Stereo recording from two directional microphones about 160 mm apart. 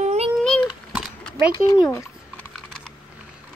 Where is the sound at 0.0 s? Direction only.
45° right (ahead or behind).